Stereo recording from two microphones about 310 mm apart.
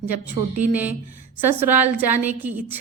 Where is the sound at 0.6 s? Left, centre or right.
Centre.